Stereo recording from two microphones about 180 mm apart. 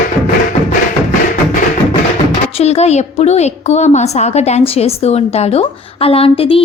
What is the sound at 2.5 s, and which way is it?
A woman's voice, 35° left (ahead or behind).